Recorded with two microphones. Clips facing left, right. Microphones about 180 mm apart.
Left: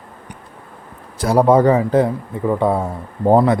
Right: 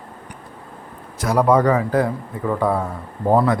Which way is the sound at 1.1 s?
30° left (ahead or behind).